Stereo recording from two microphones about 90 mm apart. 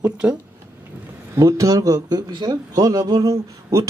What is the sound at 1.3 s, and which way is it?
A man's voice, 35° right (ahead or behind).